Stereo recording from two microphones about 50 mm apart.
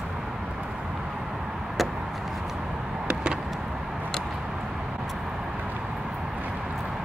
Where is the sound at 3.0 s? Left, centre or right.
Centre.